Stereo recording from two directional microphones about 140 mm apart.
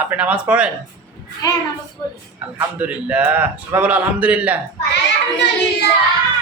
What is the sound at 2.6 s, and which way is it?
A man's voice, 10° right (ahead or behind).